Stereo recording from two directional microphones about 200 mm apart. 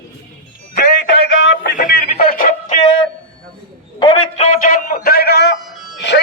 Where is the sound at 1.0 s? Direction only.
50° left (ahead or behind).